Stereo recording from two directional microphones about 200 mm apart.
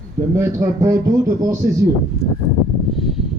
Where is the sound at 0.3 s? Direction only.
15° right (ahead or behind).